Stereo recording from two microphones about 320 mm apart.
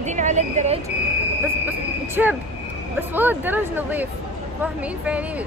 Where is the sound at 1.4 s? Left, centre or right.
Centre.